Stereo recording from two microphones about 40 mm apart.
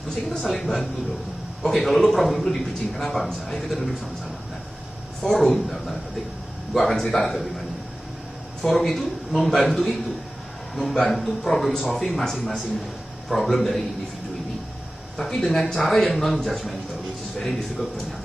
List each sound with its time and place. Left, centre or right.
0.1 s speech: centre
0.5 s a man's voice: centre
5.2 s a man's voice: centre
8.6 s a man's voice: centre
15.1 s a man's voice: centre